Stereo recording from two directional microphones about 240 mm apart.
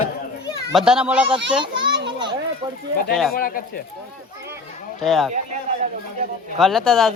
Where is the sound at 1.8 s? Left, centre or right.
Right.